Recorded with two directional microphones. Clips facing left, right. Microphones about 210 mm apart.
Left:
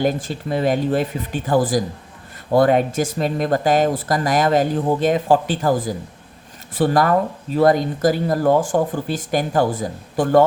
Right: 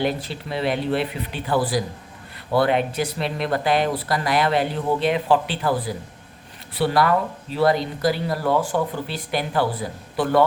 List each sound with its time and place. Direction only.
0.0 s speech: 45° left (ahead or behind)